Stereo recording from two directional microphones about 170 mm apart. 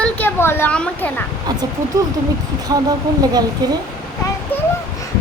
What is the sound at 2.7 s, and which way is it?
Speech, 20° right (ahead or behind).